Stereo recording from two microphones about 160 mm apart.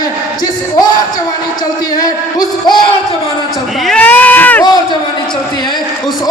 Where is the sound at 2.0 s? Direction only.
25° left (ahead or behind).